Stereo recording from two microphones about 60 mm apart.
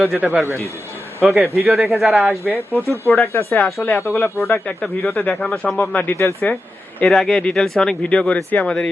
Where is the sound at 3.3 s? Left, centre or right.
Left.